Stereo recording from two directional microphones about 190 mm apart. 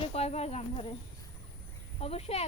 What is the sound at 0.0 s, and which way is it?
Speech, 35° left (ahead or behind).